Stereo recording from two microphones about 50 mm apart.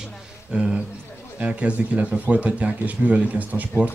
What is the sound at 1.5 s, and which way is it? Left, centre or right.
Speech, right.